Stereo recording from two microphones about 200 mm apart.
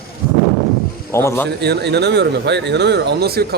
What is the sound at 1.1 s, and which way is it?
Speech, 15° left (ahead or behind).